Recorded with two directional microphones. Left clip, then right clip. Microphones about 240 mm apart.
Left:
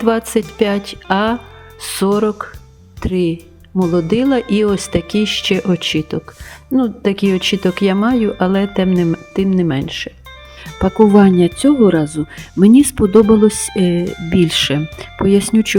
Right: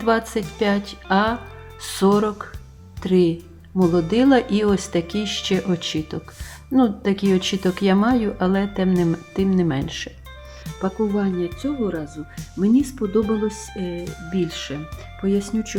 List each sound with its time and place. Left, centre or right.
0.0 s speech: left
10.8 s speech: left
14.0 s speech: centre
14.3 s speech: left